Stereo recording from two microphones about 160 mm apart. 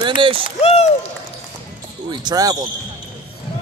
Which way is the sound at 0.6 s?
40° left (ahead or behind).